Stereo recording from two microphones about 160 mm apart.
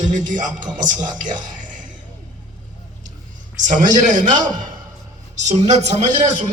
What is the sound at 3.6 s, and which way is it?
Speech, 50° right (ahead or behind).